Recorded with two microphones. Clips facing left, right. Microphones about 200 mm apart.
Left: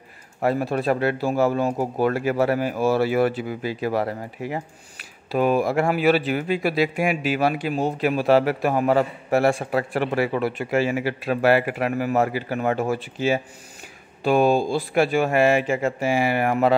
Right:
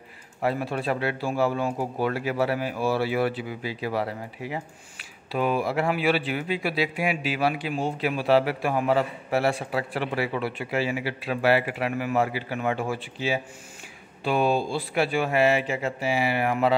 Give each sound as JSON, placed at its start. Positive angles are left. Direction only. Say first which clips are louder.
{"t": 0.4, "sound": "speech", "louder": "left 4 dB", "side_deg": 45}